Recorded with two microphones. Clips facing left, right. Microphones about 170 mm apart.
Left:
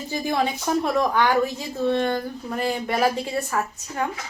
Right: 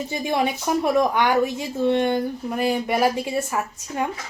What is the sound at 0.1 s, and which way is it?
Speech, 15° right (ahead or behind).